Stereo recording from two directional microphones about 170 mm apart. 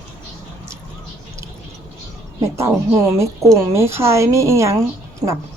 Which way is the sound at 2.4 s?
15° right (ahead or behind).